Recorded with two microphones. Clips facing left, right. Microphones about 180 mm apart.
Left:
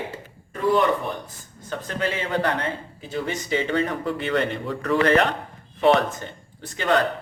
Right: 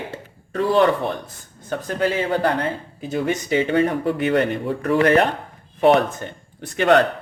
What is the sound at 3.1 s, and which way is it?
Speech, 55° right (ahead or behind).